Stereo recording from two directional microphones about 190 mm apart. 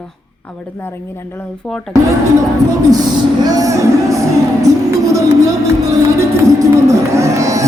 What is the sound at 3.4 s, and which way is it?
Music, 20° right (ahead or behind).